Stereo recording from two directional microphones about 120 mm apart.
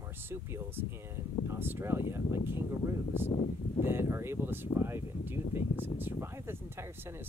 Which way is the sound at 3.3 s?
85° left.